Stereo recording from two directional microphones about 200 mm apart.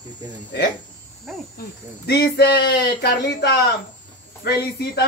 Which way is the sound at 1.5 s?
55° left (ahead or behind).